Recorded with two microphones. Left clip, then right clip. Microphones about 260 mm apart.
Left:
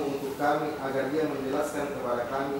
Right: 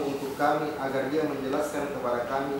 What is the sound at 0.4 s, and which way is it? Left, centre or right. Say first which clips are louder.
A man's voice: right 2 dB; centre.